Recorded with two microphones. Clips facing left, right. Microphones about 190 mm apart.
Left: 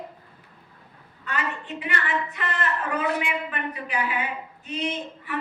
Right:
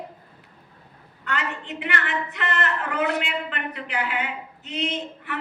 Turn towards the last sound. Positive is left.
turn(degrees=-70)  # may be behind; listen again after turning